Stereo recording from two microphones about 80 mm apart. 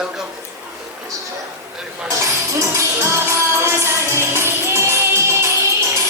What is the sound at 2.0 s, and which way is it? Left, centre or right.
Music, right.